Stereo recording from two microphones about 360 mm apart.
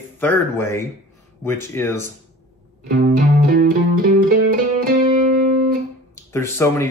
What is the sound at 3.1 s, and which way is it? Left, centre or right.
Music, right.